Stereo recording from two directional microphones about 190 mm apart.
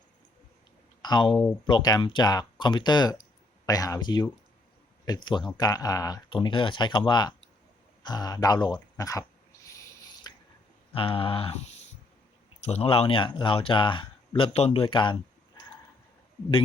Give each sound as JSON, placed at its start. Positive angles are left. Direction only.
{"t": 1.0, "sound": "speech", "side_deg": 25}
{"t": 10.3, "sound": "a sound", "side_deg": 20}
{"t": 10.9, "sound": "speech", "side_deg": 30}
{"t": 12.6, "sound": "speech", "side_deg": 35}